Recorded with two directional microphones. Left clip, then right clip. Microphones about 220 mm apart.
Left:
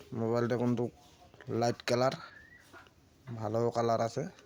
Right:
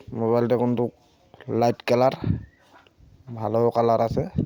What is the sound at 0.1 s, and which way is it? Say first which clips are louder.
Speech: right 10 dB; 20° right (ahead or behind).